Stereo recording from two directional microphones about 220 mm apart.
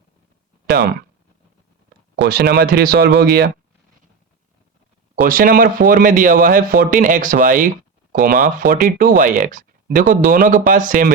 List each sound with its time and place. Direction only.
2.2 s speech: 45° right (ahead or behind)
5.2 s speech: 40° right (ahead or behind)